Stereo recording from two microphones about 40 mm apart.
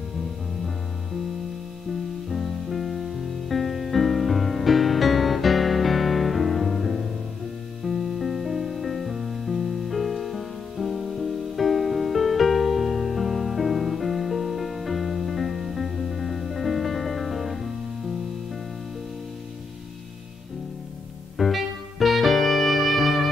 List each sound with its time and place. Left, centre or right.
2.2 s music: centre
21.4 s music: centre